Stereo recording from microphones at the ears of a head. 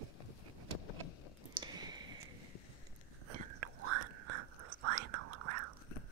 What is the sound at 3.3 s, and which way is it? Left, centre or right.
Whispering, right.